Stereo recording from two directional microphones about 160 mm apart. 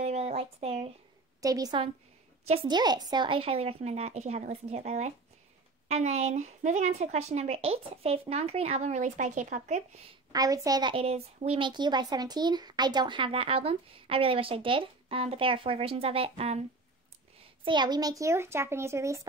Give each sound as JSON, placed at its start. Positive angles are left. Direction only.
{"t": 0.0, "sound": "a sound", "side_deg": -40}
{"t": 1.4, "sound": "a child's voice", "side_deg": -20}
{"t": 2.4, "sound": "a woman's voice", "side_deg": -40}
{"t": 2.7, "sound": "a woman's voice", "side_deg": -25}
{"t": 10.3, "sound": "a woman's voice", "side_deg": -20}
{"t": 17.6, "sound": "a child's voice", "side_deg": -25}